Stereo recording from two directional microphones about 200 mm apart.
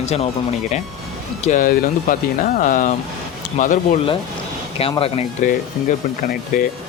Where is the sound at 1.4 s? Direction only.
40° left (ahead or behind).